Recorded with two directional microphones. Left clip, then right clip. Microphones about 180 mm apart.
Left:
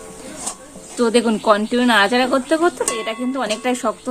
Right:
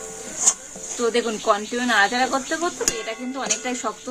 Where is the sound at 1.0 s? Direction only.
75° left (ahead or behind).